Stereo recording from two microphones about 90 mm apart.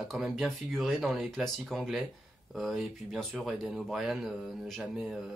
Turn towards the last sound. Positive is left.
turn(degrees=0)  # may be behind; listen again after turning